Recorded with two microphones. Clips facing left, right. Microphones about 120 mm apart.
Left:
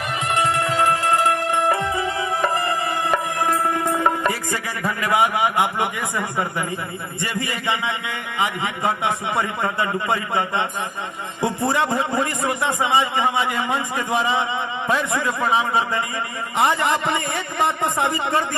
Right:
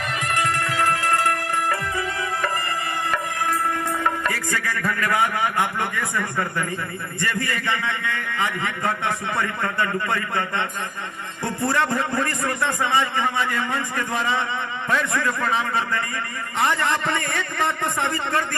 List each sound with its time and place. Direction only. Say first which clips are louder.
0.3 s music: left 4 dB; 20° left (ahead or behind)
7.2 s a man's voice: right 1 dB; 20° left (ahead or behind)